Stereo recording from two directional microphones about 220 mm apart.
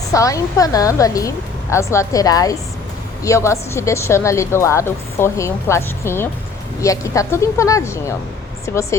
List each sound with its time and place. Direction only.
0.1 s speech: 15° left (ahead or behind)